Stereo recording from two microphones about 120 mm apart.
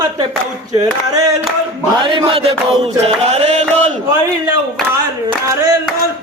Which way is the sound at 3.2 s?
65° right (ahead or behind).